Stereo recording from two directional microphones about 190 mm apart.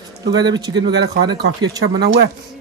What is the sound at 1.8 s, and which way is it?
Speech, 60° right (ahead or behind).